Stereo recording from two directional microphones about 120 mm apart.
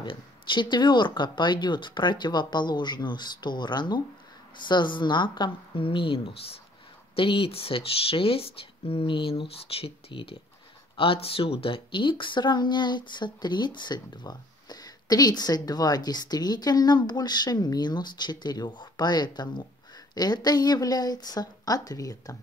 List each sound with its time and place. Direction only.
0.0 s a woman's voice: 45° left (ahead or behind)